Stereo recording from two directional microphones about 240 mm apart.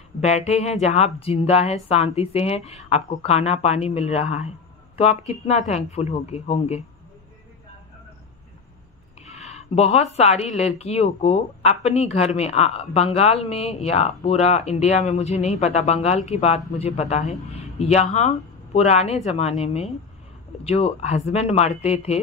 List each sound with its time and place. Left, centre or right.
0.2 s speech: left
9.3 s speech: left